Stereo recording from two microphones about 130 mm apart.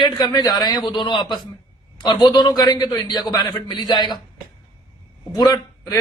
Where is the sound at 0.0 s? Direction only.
30° left (ahead or behind).